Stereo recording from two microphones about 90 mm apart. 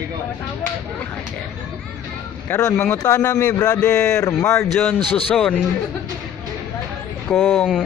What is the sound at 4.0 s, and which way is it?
Speech, 10° left (ahead or behind).